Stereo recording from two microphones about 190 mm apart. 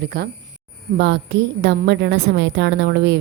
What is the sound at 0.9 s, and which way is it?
A woman's voice, 70° right (ahead or behind).